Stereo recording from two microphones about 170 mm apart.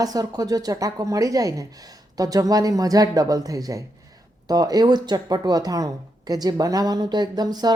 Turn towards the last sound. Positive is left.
turn(degrees=-25)  # may be behind; listen again after turning